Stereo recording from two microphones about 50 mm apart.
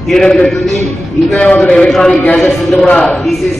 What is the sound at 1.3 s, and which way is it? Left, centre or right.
Speech, left.